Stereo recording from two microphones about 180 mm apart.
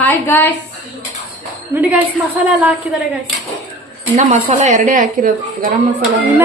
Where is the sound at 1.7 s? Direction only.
10° right (ahead or behind).